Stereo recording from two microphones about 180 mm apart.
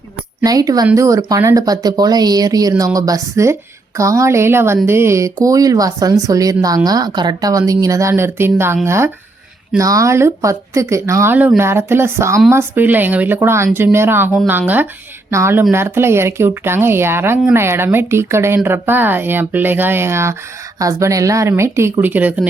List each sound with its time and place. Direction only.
0.4 s speech: 20° right (ahead or behind)
15.3 s speech: 15° right (ahead or behind)